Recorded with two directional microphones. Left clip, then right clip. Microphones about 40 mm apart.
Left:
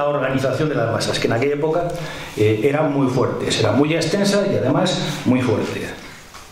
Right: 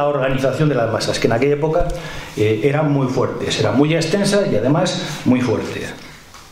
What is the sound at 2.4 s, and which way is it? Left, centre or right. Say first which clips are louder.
Speech: even; centre.